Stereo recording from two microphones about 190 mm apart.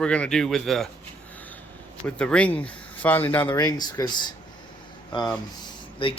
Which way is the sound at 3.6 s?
20° left (ahead or behind).